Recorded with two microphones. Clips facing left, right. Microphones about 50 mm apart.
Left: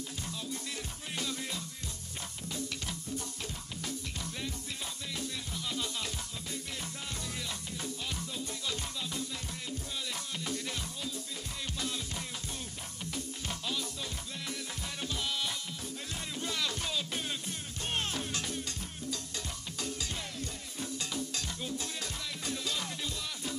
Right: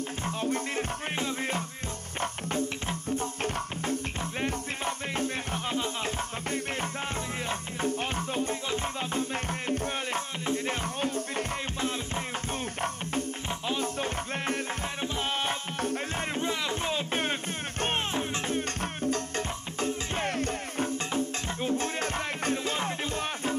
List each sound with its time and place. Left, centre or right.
0.2 s music: right
10.4 s music: right
13.5 s music: right
13.9 s music: right
16.3 s music: right
17.2 s music: right
17.9 s music: right
18.6 s music: right